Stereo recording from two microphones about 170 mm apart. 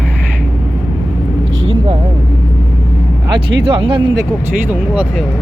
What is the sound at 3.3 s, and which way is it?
Speech, 30° right (ahead or behind).